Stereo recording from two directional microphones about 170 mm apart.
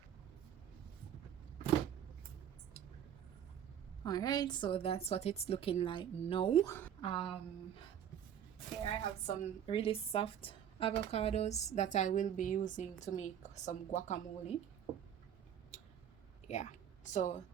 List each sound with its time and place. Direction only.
4.0 s a woman's voice: 25° left (ahead or behind)
6.7 s a woman's voice: 15° left (ahead or behind)
7.0 s speech: 30° left (ahead or behind)
9.2 s a woman's voice: 35° left (ahead or behind)
16.5 s speech: 45° left (ahead or behind)